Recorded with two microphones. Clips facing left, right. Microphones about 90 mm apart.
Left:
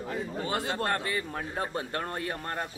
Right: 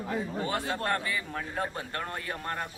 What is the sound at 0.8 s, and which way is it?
Speech, 35° left (ahead or behind).